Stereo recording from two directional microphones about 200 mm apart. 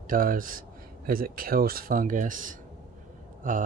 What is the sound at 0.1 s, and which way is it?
Speech, 45° right (ahead or behind).